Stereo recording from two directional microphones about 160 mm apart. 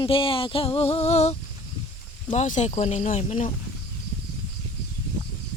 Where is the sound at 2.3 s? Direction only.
50° left (ahead or behind).